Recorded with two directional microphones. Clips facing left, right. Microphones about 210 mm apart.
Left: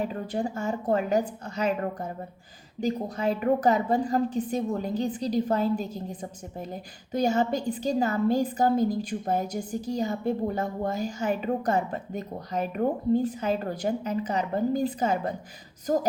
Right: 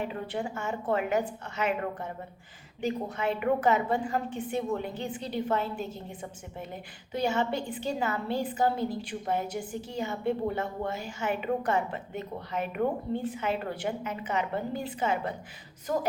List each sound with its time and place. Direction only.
0.0 s a woman's voice: 40° left (ahead or behind)